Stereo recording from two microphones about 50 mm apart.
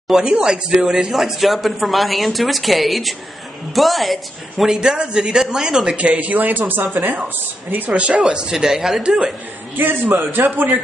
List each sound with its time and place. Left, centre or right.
0.1 s speech: centre
1.1 s a woman's voice: centre
4.6 s speech: centre
5.9 s a man's voice: right
8.1 s speech: centre
9.8 s a man's voice: right